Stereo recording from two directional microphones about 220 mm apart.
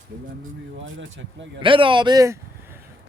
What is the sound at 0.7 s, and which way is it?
Speech, 60° right (ahead or behind).